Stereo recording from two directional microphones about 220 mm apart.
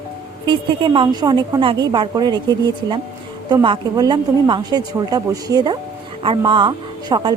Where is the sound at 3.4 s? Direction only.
20° right (ahead or behind).